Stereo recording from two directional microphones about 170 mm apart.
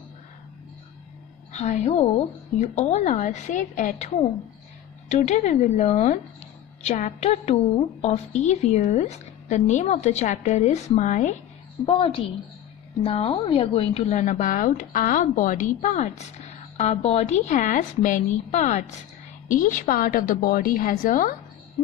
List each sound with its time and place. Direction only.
1.5 s a woman's voice: 45° left (ahead or behind)
11.8 s a woman's voice: 35° left (ahead or behind); by 21.4 s 55° left (ahead or behind)